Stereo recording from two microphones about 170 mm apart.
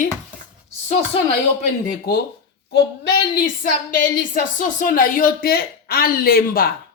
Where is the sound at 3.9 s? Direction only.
55° left (ahead or behind).